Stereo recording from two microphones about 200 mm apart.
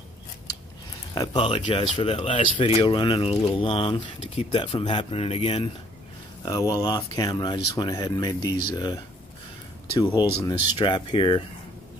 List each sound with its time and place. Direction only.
1.1 s speech: 20° left (ahead or behind)
6.7 s speech: 20° left (ahead or behind)